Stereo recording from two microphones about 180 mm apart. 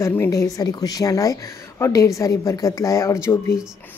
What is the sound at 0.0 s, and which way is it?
A woman's voice, 15° left (ahead or behind).